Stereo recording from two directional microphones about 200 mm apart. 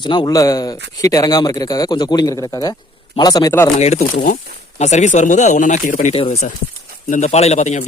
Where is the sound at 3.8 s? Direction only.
35° left (ahead or behind).